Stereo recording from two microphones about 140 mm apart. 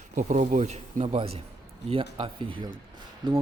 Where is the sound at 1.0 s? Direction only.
40° right (ahead or behind).